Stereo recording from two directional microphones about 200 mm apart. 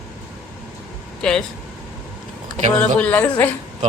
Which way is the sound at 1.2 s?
5° left (ahead or behind).